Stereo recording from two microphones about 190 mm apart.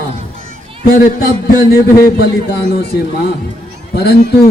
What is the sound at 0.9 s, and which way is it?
A man's voice, 50° left (ahead or behind).